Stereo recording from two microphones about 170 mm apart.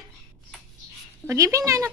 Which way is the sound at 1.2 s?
20° right (ahead or behind).